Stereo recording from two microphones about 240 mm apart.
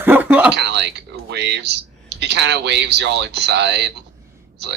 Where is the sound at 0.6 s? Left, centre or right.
Right.